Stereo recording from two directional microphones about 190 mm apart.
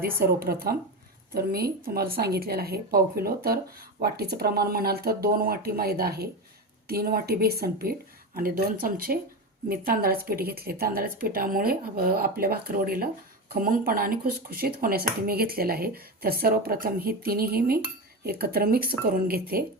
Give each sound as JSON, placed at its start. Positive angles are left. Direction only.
{"t": 0.0, "sound": "speech", "side_deg": -50}